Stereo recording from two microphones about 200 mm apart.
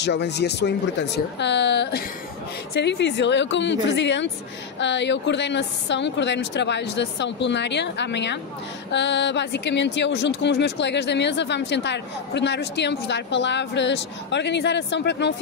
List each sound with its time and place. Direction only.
0.0 s speech: 60° left (ahead or behind)